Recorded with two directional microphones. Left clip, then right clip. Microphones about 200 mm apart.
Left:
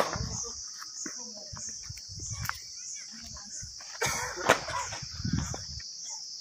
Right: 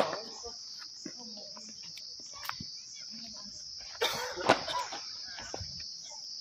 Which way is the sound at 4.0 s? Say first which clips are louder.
Left 1 dB; 40° right (ahead or behind).